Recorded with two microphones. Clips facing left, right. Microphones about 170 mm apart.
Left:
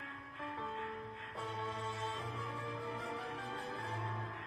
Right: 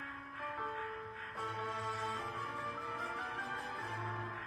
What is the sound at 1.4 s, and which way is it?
Music, 25° left (ahead or behind).